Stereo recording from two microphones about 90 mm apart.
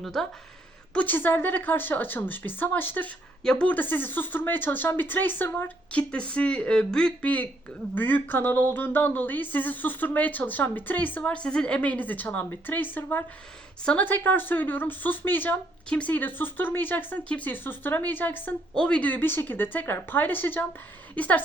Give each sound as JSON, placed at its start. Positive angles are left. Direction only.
{"t": 0.0, "sound": "speech", "side_deg": 5}
{"t": 0.9, "sound": "speech", "side_deg": 20}
{"t": 3.4, "sound": "speech", "side_deg": 5}
{"t": 3.7, "sound": "speech", "side_deg": 20}
{"t": 18.7, "sound": "speech", "side_deg": 10}